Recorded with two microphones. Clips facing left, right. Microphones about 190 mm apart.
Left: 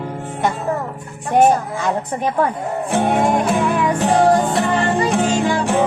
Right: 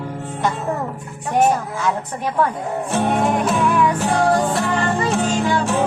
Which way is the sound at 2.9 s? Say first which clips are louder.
Left 2 dB; 15° left (ahead or behind).